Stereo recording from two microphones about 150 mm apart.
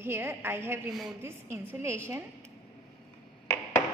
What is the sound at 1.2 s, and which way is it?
A woman's voice, 15° right (ahead or behind).